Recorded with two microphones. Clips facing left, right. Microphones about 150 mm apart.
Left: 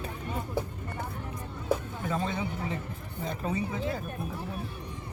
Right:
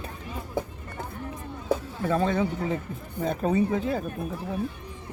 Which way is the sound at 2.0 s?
75° right (ahead or behind).